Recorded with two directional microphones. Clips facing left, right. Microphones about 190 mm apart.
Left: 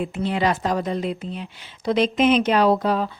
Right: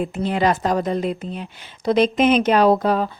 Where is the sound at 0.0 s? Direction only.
45° right (ahead or behind).